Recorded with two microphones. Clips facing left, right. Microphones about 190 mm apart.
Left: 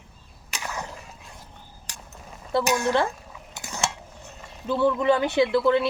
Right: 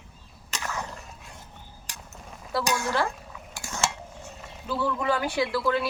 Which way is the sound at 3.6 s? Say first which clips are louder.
Even; 15° left (ahead or behind).